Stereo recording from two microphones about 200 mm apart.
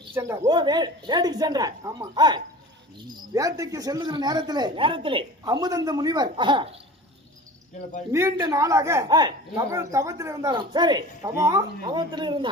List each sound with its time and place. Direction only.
0.1 s a man's voice: 15° right (ahead or behind)
8.1 s a man's voice: 15° right (ahead or behind)